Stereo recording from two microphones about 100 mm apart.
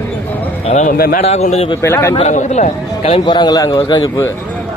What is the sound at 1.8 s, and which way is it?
Speech, 25° left (ahead or behind).